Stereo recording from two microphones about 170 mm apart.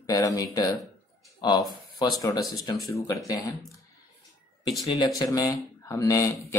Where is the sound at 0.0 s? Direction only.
20° left (ahead or behind).